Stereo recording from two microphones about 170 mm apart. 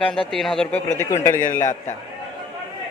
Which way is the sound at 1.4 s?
45° left (ahead or behind).